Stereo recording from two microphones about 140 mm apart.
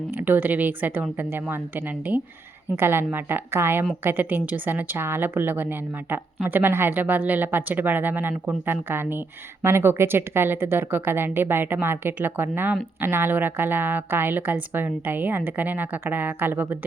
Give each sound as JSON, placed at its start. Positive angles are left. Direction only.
{"t": 0.1, "sound": "speech", "side_deg": -15}